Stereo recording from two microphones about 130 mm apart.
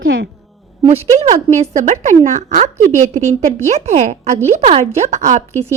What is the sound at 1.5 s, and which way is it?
A woman's voice, 65° right (ahead or behind).